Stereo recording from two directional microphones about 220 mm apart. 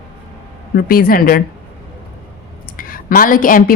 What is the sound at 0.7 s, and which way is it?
Speech, 40° left (ahead or behind).